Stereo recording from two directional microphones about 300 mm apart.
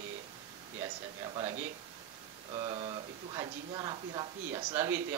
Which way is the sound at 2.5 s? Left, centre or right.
Centre.